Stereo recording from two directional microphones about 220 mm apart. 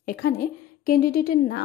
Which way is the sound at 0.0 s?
40° left (ahead or behind).